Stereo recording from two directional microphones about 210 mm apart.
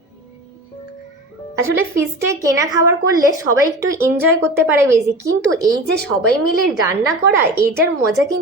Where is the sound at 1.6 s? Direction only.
15° right (ahead or behind).